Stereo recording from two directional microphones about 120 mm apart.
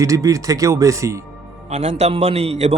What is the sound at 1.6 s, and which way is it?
A man's voice, 65° right (ahead or behind).